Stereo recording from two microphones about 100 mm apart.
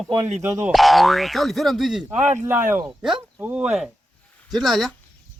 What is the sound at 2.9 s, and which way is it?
Speech, 5° right (ahead or behind).